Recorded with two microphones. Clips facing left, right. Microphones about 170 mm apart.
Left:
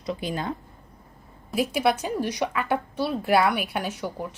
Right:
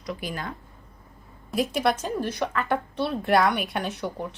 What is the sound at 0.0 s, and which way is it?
Speech, 25° left (ahead or behind).